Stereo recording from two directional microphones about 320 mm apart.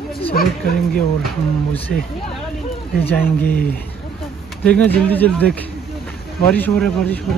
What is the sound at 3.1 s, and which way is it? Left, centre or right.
Speech, centre.